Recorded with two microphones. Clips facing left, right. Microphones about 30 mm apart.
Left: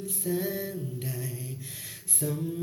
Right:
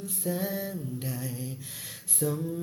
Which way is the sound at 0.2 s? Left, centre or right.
Right.